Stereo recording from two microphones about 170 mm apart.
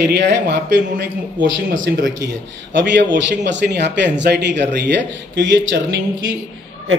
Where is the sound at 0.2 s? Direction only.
90° right.